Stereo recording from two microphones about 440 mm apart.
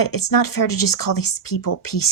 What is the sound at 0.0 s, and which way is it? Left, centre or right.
A woman's voice, left.